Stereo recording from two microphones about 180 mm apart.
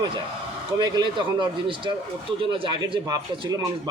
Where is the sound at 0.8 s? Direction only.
25° right (ahead or behind).